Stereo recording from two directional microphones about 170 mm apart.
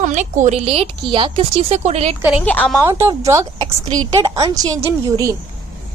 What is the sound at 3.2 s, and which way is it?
A woman's voice, 20° right (ahead or behind).